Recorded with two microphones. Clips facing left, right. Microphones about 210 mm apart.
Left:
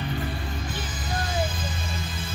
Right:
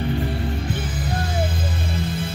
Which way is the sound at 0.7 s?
60° right (ahead or behind).